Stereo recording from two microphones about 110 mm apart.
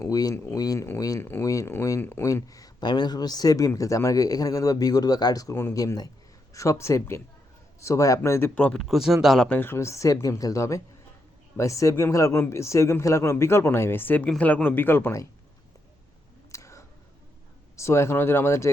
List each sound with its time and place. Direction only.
0.0 s speech: 35° left (ahead or behind); by 9.5 s centre (ahead or behind)
9.5 s speech: 20° left (ahead or behind)
16.5 s a sound: 30° left (ahead or behind)
17.7 s speech: 25° left (ahead or behind)